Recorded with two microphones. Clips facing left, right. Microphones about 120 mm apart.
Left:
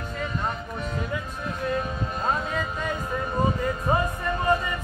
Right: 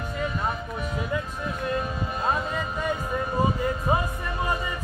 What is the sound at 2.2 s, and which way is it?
Music, 5° right (ahead or behind).